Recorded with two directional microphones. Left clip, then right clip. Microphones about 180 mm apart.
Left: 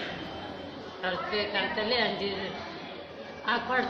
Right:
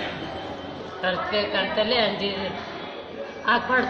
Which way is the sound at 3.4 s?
15° left (ahead or behind).